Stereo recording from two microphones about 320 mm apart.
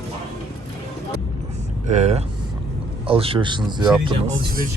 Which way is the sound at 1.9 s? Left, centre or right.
Right.